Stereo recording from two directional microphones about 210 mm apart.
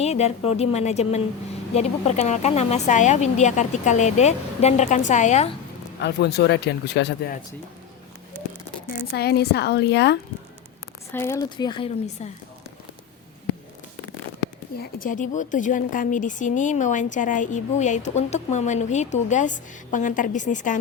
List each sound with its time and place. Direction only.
0.0 s speech: 30° left (ahead or behind)
6.0 s speech: 50° left (ahead or behind)
9.1 s speech: 50° left (ahead or behind)
11.1 s speech: 10° left (ahead or behind)
12.2 s speech: 30° left (ahead or behind)
14.9 s speech: 40° left (ahead or behind)